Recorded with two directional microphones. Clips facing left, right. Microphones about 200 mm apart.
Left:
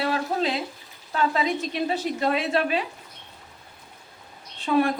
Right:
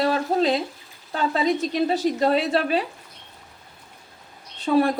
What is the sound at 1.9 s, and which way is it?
Speech, 35° right (ahead or behind).